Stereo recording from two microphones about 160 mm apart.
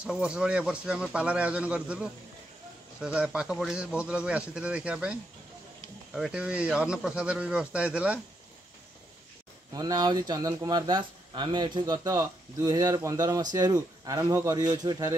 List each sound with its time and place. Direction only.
0.0 s a man's voice: 5° right (ahead or behind)
9.7 s speech: 25° right (ahead or behind)